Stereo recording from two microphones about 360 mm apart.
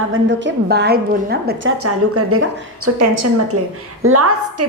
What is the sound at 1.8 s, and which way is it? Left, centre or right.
A woman's voice, right.